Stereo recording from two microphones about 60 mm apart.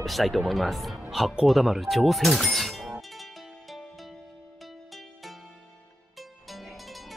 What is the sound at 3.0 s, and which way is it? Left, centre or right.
Music, centre.